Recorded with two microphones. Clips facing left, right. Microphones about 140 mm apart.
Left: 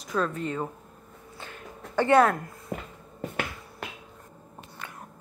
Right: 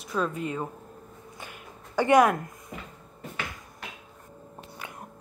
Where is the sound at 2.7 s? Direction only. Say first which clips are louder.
Left 7 dB; 55° left (ahead or behind).